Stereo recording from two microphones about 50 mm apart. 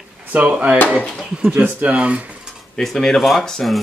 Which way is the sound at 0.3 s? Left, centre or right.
Right.